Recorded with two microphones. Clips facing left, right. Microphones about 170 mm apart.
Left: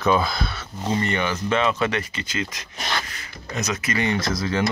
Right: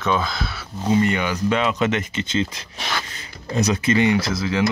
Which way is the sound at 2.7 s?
Centre (ahead or behind).